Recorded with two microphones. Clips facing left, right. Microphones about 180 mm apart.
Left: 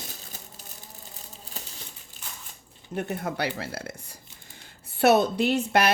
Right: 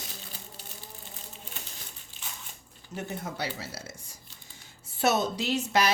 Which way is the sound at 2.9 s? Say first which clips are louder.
Left 6 dB; 60° left (ahead or behind).